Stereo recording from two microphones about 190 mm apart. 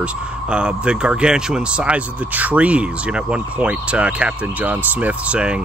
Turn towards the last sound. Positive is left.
turn(degrees=-5)  # may be behind; listen again after turning